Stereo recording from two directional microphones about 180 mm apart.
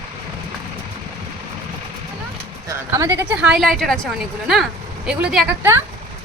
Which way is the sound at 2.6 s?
15° right (ahead or behind).